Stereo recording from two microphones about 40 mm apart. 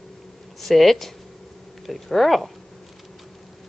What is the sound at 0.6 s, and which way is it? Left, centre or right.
Speech, centre.